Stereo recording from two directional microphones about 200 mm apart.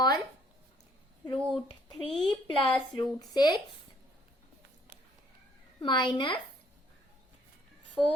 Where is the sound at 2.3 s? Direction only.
20° left (ahead or behind).